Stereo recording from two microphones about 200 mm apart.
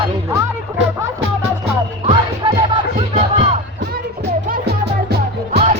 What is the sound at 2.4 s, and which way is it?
Music, 25° right (ahead or behind).